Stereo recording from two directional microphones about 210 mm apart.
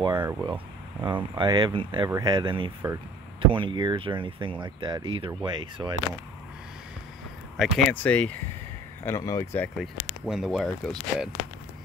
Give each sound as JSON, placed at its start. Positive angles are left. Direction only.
{"t": 0.0, "sound": "speech", "side_deg": -20}
{"t": 7.5, "sound": "speech", "side_deg": 5}
{"t": 10.2, "sound": "speech", "side_deg": 0}